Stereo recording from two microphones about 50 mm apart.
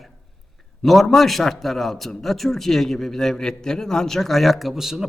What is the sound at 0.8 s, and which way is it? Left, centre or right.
A man's voice, centre.